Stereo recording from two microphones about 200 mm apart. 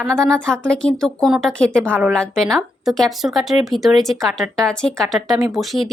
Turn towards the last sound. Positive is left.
turn(degrees=0)  # may be behind; listen again after turning